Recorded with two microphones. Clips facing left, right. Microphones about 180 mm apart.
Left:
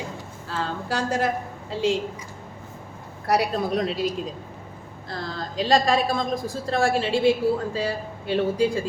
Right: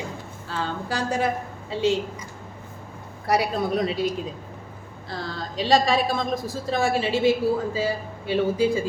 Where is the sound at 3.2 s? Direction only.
Centre (ahead or behind).